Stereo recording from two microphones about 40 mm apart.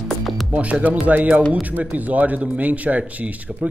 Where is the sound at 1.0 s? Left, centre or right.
Right.